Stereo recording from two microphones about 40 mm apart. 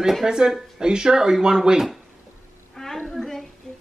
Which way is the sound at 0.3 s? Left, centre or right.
Centre.